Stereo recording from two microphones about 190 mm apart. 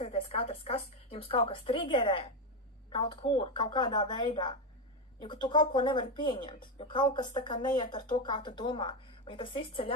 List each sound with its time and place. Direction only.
0.0 s speech: 30° left (ahead or behind)